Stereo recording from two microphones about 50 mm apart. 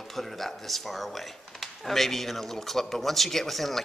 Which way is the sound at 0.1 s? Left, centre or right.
Centre.